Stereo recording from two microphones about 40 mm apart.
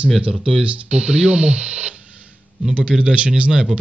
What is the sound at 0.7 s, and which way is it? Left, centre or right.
Speech, right.